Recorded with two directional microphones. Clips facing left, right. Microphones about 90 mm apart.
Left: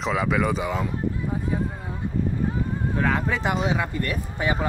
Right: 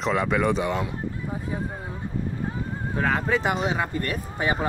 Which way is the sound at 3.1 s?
25° right (ahead or behind).